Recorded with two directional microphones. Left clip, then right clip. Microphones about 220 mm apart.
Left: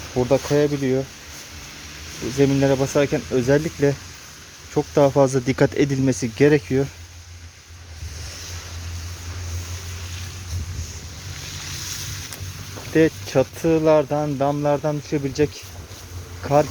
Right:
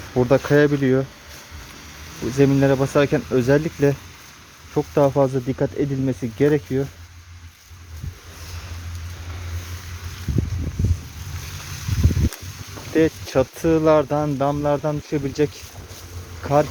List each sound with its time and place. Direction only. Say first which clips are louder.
0.1 s speech: right 2 dB; 20° right (ahead or behind)
2.4 s speech: right 1 dB; 10° right (ahead or behind); by 5.5 s 5° left (ahead or behind)
5.5 s speech: left 4 dB; 15° left (ahead or behind)
12.9 s speech: left 1 dB; centre (ahead or behind)